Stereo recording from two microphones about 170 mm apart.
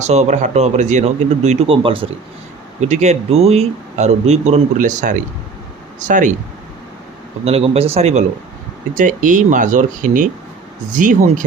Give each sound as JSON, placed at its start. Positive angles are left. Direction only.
{"t": 0.0, "sound": "a man's voice", "side_deg": -40}
{"t": 2.8, "sound": "a man's voice", "side_deg": -40}
{"t": 7.4, "sound": "a man's voice", "side_deg": -35}
{"t": 9.0, "sound": "speech", "side_deg": -50}